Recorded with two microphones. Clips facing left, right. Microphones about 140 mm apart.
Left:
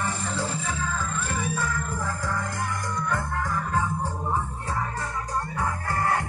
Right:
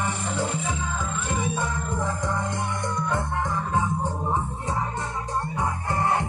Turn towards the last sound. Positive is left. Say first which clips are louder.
# right 1 dB
turn(degrees=-20)  # may be behind; listen again after turning